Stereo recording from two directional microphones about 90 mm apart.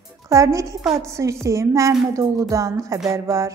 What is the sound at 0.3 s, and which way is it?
Speech, 35° right (ahead or behind).